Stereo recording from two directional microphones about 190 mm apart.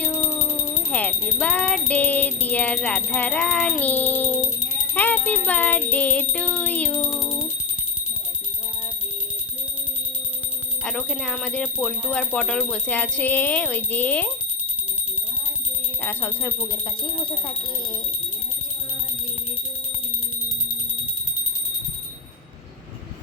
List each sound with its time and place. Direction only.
0.0 s speech: 15° left (ahead or behind)
4.9 s music: 10° left (ahead or behind)
5.5 s speech: 10° left (ahead or behind)
6.9 s a sound: centre (ahead or behind)
7.2 s alarm clock: 15° left (ahead or behind)
10.8 s speech: 5° left (ahead or behind)
16.0 s speech: 10° left (ahead or behind)